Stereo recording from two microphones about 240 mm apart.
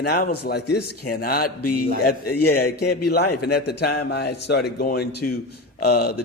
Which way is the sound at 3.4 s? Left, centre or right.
Left.